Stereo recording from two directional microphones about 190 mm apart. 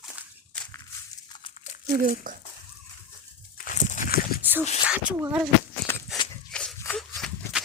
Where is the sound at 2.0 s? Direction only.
45° right (ahead or behind).